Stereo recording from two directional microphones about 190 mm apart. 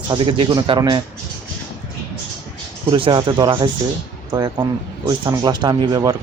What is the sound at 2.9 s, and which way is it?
Speech, 25° right (ahead or behind).